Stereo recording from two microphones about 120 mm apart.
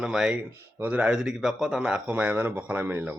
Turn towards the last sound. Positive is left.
turn(degrees=-15)  # may be behind; listen again after turning